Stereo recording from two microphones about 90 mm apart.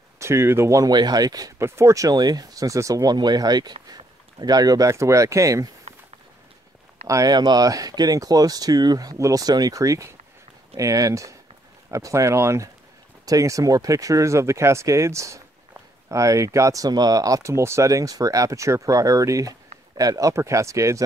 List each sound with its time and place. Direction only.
0.2 s speech: 30° right (ahead or behind)
0.8 s speech: 50° right (ahead or behind)
1.6 s speech: 30° right (ahead or behind)
7.1 s speech: 35° right (ahead or behind)
7.3 s speech: 50° right (ahead or behind)